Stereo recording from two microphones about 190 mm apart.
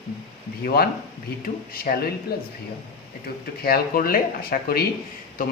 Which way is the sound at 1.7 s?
55° left (ahead or behind).